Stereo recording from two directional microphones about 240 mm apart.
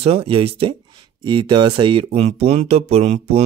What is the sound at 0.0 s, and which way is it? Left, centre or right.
Speech, right.